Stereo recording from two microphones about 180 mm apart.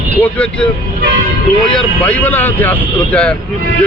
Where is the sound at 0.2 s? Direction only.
10° left (ahead or behind).